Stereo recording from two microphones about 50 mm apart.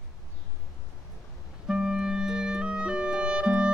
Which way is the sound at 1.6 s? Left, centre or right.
Centre.